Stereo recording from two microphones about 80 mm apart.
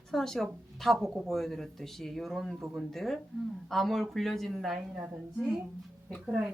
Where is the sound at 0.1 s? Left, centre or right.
Centre.